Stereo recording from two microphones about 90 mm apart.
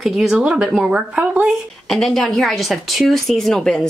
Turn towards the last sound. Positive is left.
turn(degrees=10)  # may be behind; listen again after turning